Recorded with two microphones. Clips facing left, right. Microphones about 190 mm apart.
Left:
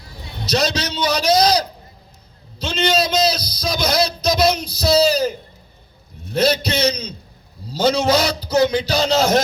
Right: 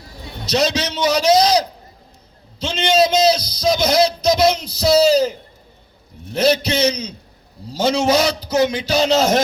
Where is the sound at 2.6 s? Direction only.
25° right (ahead or behind).